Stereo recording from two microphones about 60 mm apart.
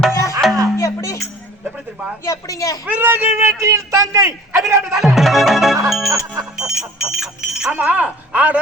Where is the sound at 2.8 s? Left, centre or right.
Right.